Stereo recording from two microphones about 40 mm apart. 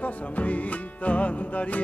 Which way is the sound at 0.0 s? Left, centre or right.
Left.